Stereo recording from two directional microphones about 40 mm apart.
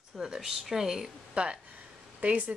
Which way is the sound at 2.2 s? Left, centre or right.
Right.